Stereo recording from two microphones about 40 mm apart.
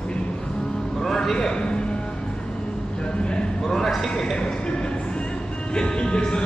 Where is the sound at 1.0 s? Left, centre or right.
Centre.